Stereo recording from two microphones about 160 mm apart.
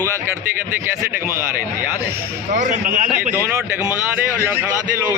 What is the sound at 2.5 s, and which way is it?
Speech, 50° right (ahead or behind).